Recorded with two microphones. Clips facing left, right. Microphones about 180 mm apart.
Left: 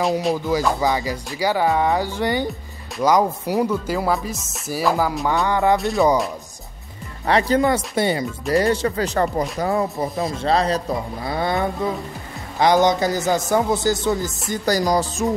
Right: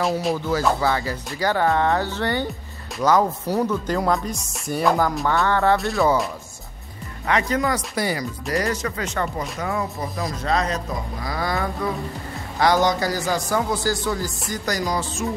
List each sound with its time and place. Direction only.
0.7 s speech: 15° left (ahead or behind)
5.2 s speech: 15° left (ahead or behind)
5.8 s speech: centre (ahead or behind)
7.2 s speech: 35° left (ahead or behind)
14.5 s music: 35° left (ahead or behind)